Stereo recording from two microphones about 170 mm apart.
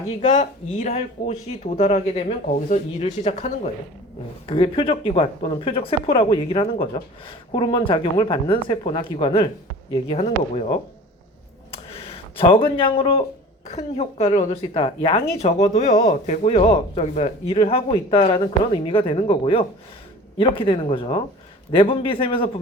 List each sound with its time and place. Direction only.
0.2 s speech: 45° left (ahead or behind)
12.4 s speech: 30° left (ahead or behind)